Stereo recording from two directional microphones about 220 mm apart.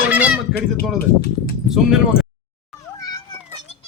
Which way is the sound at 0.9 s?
45° left (ahead or behind).